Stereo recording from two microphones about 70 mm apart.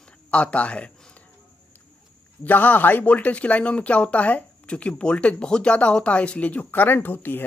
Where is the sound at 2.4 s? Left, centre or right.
Left.